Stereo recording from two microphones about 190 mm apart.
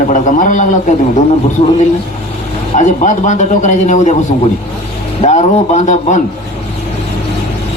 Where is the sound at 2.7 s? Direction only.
40° left (ahead or behind).